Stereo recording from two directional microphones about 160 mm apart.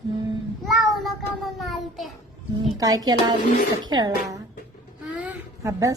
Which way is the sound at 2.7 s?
25° right (ahead or behind).